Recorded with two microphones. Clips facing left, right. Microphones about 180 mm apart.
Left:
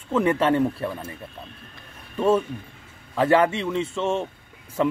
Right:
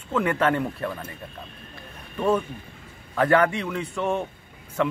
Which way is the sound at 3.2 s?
25° left (ahead or behind).